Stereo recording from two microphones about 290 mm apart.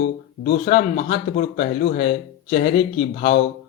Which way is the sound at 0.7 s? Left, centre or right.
Left.